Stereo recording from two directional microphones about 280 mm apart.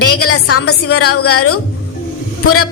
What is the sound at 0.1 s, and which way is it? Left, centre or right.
Speech, left.